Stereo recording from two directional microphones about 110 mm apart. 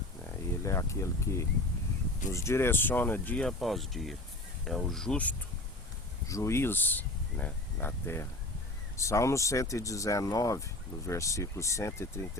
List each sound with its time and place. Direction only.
0.3 s speech: 30° left (ahead or behind); by 5.4 s 10° left (ahead or behind)
6.2 s speech: 25° left (ahead or behind)